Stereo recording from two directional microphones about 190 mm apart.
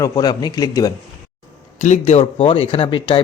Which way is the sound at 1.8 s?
35° left (ahead or behind).